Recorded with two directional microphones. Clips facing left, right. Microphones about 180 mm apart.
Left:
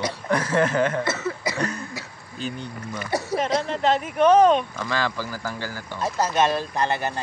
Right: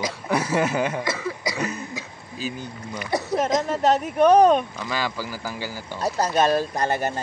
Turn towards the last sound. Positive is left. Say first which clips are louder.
# right 1 dB
turn(degrees=-40)  # may be behind; listen again after turning